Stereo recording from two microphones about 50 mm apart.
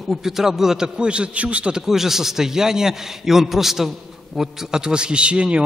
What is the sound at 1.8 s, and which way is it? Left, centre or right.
A man's voice, centre.